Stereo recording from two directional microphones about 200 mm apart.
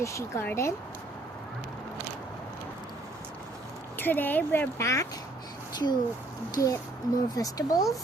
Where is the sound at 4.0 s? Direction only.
10° left (ahead or behind).